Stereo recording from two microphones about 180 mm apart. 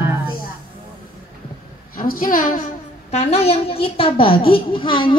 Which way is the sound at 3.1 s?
40° left (ahead or behind).